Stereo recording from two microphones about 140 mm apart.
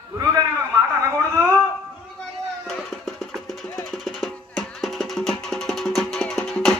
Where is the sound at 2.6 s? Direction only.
Centre (ahead or behind).